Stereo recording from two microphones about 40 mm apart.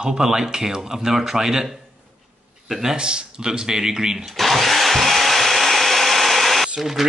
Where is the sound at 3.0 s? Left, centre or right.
Right.